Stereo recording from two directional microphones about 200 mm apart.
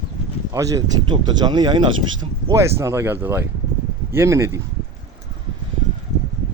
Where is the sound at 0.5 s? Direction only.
15° right (ahead or behind).